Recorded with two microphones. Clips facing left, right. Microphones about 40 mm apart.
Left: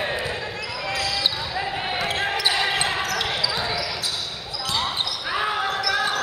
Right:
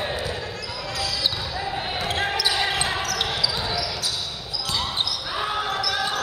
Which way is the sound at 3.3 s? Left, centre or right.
Left.